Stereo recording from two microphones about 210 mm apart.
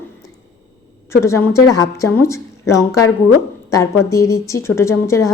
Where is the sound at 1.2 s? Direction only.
15° left (ahead or behind).